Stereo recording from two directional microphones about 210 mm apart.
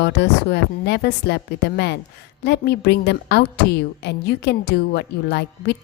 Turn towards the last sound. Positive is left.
turn(degrees=55)  # may be behind; listen again after turning